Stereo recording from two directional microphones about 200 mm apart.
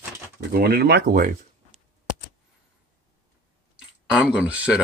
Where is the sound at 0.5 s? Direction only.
50° right (ahead or behind).